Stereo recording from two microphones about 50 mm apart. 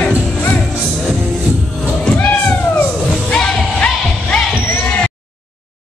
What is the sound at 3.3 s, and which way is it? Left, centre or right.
Music, centre.